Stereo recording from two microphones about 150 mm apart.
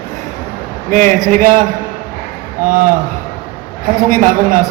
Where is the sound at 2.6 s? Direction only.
65° right (ahead or behind).